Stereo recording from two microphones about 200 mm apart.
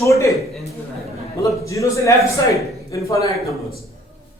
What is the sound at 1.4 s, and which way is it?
A man's voice, 15° left (ahead or behind).